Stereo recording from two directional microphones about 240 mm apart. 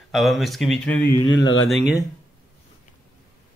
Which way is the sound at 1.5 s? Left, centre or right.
Left.